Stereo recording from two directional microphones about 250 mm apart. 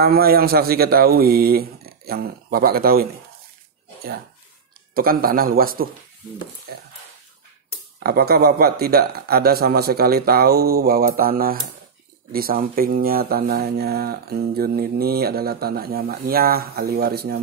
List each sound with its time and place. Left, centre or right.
0.0 s speech: right
4.9 s speech: right
8.0 s speech: right